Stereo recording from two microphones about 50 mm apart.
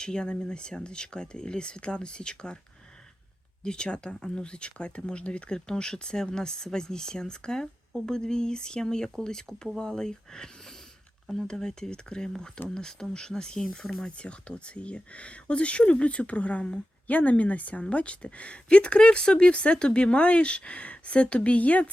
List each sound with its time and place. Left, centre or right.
0.0 s speech: centre
3.6 s a woman's voice: centre